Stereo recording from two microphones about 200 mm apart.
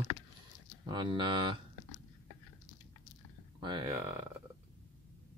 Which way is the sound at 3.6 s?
20° right (ahead or behind).